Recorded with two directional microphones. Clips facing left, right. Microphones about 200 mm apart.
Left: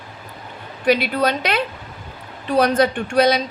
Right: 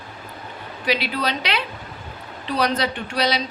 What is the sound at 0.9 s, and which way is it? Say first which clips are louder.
A woman's voice: left 6 dB; 50° left (ahead or behind).